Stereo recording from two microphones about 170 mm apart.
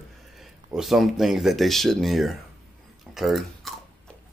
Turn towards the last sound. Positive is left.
turn(degrees=0)  # may be behind; listen again after turning